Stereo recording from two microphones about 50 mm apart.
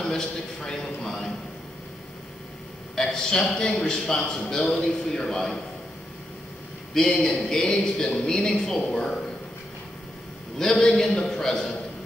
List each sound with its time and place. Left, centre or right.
0.0 s a man's voice: centre
3.0 s a man's voice: centre
6.9 s a man's voice: centre
10.6 s a man's voice: centre